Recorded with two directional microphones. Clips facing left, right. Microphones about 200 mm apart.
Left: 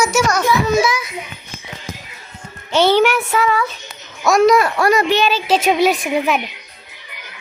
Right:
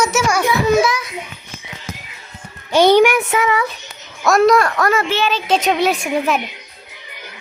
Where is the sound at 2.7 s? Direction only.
15° right (ahead or behind).